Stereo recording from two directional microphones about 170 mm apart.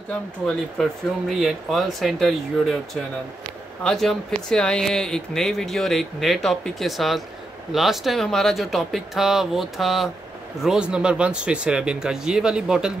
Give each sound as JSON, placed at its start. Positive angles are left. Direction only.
{"t": 0.1, "sound": "speech", "side_deg": 5}